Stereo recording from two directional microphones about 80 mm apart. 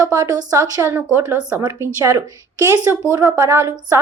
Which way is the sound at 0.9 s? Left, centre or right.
Right.